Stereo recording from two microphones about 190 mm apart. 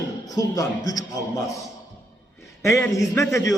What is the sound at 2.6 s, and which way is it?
Speech, 15° left (ahead or behind).